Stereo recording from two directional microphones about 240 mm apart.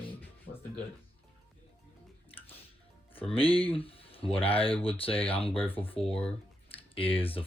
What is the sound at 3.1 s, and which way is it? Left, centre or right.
Speech, left.